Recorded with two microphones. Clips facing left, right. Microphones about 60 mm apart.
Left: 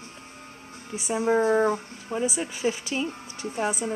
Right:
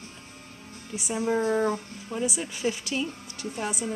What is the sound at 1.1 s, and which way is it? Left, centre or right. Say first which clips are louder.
Speech: left 4 dB; centre.